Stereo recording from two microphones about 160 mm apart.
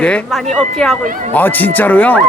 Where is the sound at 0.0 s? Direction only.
5° left (ahead or behind).